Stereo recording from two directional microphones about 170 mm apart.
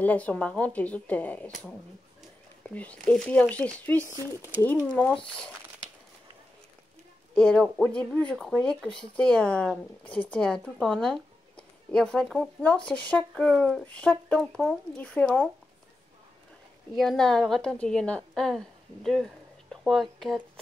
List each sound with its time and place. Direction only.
0.0 s a woman's voice: 10° left (ahead or behind)
2.7 s a woman's voice: 10° left (ahead or behind)
4.0 s speech: 15° right (ahead or behind)
4.6 s a woman's voice: 15° left (ahead or behind)
7.3 s a woman's voice: 5° left (ahead or behind)
16.9 s a woman's voice: centre (ahead or behind)
19.0 s a sound: 5° left (ahead or behind)